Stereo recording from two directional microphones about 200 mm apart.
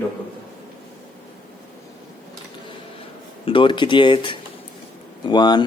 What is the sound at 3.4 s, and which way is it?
Speech, 25° left (ahead or behind).